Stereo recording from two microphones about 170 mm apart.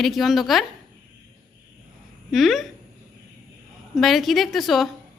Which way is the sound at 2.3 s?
Centre (ahead or behind).